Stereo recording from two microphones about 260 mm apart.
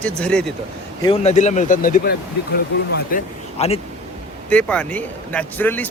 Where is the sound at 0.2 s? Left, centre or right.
Centre.